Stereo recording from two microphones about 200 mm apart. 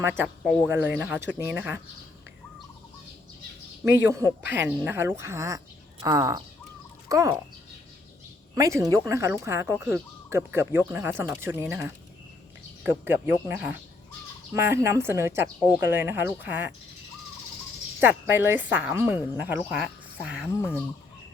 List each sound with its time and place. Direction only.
0.0 s speech: 10° right (ahead or behind)
4.0 s speech: 10° right (ahead or behind)
8.5 s speech: 15° right (ahead or behind)
18.0 s speech: 10° right (ahead or behind)
20.6 s speech: 10° left (ahead or behind)